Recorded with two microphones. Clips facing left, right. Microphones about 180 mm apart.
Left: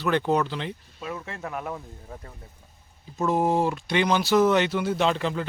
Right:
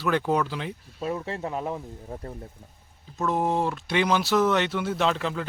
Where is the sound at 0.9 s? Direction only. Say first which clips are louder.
Right 5 dB; 35° right (ahead or behind).